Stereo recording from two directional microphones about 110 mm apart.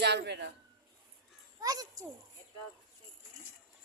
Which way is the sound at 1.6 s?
35° right (ahead or behind).